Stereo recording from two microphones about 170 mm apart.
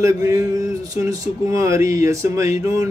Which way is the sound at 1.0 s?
20° right (ahead or behind).